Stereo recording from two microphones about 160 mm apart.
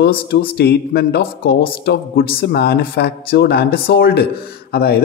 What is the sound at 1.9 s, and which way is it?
Speech, 90° left.